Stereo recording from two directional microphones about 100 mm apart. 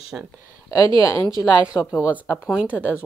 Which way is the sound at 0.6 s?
35° left (ahead or behind).